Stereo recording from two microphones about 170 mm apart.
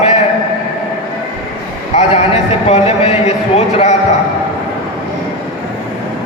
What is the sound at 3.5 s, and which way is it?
Speech, 40° left (ahead or behind).